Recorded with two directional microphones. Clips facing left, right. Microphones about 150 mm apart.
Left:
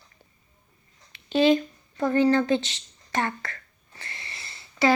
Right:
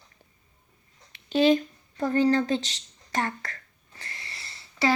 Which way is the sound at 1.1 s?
45° right (ahead or behind).